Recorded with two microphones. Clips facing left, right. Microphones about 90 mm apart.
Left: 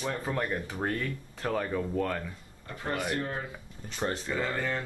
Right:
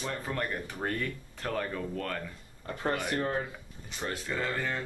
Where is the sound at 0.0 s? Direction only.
5° left (ahead or behind).